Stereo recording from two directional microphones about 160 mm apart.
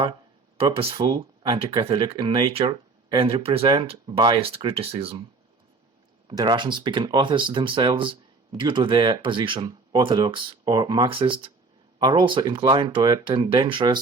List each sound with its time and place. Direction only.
0.5 s speech: 35° right (ahead or behind)
6.2 s speech: 25° right (ahead or behind)